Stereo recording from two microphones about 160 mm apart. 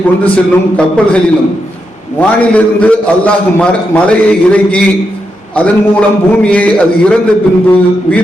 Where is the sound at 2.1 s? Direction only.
10° left (ahead or behind).